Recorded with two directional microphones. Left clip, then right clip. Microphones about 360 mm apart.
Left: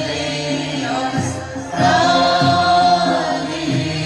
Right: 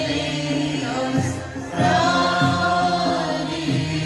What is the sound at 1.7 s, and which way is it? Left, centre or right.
Music, centre.